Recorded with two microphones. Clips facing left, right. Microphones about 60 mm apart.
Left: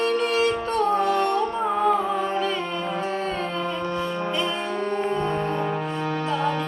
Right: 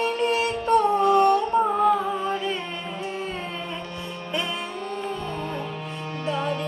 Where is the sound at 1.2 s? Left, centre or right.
Right.